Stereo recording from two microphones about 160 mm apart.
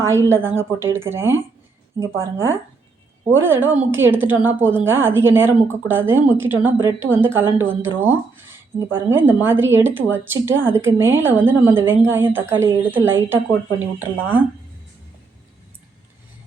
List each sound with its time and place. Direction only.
0.1 s a woman's voice: 15° right (ahead or behind)
3.3 s a woman's voice: 15° right (ahead or behind)